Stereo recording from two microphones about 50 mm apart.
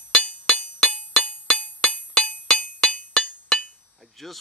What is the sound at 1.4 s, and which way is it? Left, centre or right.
Music, centre.